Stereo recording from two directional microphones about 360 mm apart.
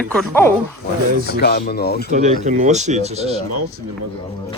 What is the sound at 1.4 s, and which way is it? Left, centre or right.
Speech, left.